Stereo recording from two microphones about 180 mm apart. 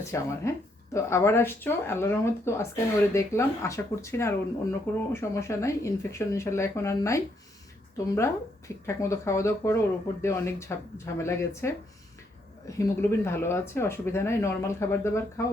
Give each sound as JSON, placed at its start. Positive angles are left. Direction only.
{"t": 0.1, "sound": "speech", "side_deg": 15}